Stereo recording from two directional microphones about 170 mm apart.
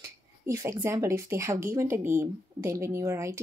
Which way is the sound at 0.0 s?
20° right (ahead or behind).